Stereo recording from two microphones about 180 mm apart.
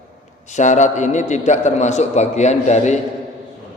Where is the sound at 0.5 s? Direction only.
40° left (ahead or behind).